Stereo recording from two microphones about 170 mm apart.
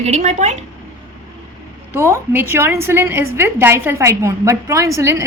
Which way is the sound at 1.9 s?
15° right (ahead or behind).